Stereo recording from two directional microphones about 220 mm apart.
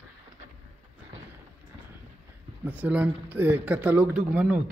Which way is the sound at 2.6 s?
10° right (ahead or behind).